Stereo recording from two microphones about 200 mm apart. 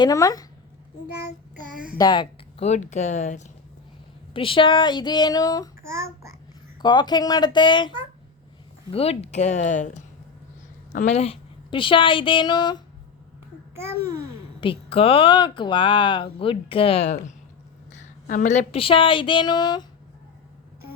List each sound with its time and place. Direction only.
0.0 s speech: 15° left (ahead or behind)
2.0 s a woman's voice: 20° left (ahead or behind)
2.6 s speech: 35° left (ahead or behind)
4.4 s a woman's voice: 25° left (ahead or behind)
6.8 s a woman's voice: 20° left (ahead or behind)
14.6 s a woman's voice: 30° left (ahead or behind)